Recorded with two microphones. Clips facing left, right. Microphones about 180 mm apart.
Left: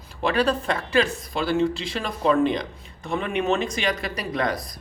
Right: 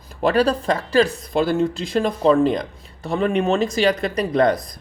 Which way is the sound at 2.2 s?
35° right (ahead or behind).